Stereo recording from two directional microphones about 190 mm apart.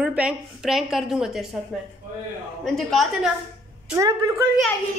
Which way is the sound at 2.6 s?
Centre (ahead or behind).